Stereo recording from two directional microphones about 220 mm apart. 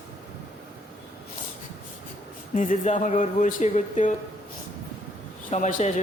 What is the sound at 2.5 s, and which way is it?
A man's voice, 35° left (ahead or behind).